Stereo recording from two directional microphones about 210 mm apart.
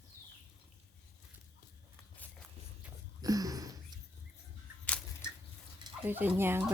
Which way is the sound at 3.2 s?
15° right (ahead or behind).